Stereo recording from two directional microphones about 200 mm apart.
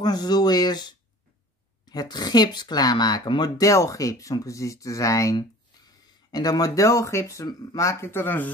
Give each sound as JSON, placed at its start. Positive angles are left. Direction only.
{"t": 0.0, "sound": "speech", "side_deg": 20}